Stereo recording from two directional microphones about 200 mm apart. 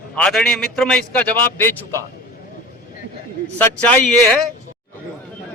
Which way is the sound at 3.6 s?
5° left (ahead or behind).